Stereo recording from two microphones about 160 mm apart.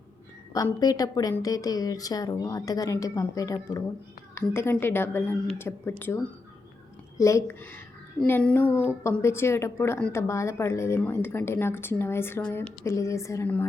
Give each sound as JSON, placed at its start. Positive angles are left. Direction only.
{"t": 0.5, "sound": "a woman's voice", "side_deg": 25}